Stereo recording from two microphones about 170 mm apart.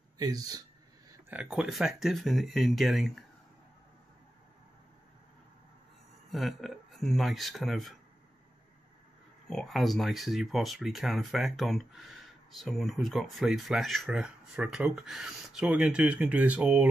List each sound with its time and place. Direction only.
0.2 s speech: 20° right (ahead or behind)
1.3 s speech: 5° right (ahead or behind)
6.3 s speech: centre (ahead or behind)
9.5 s speech: centre (ahead or behind)